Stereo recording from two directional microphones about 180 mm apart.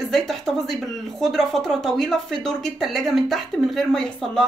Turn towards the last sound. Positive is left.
turn(degrees=5)  # may be behind; listen again after turning